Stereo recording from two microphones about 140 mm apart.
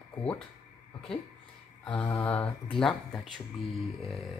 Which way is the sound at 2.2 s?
10° left (ahead or behind).